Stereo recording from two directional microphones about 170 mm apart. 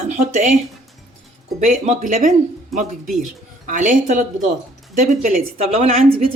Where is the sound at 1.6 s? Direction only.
45° right (ahead or behind).